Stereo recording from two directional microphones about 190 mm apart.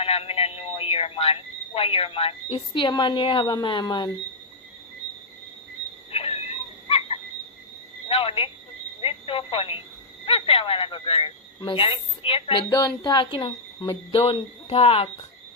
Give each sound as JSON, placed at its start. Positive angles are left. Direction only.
{"t": 0.0, "sound": "speech", "side_deg": 30}
{"t": 6.1, "sound": "a sound", "side_deg": 30}
{"t": 8.0, "sound": "speech", "side_deg": 30}